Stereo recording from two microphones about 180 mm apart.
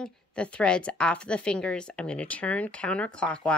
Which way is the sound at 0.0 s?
5° left (ahead or behind).